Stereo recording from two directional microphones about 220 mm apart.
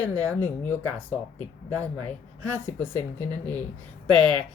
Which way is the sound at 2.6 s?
10° left (ahead or behind).